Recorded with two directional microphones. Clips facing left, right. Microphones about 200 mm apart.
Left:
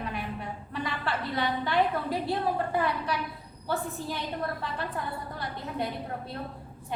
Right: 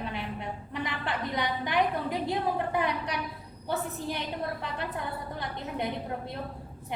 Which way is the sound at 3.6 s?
20° right (ahead or behind).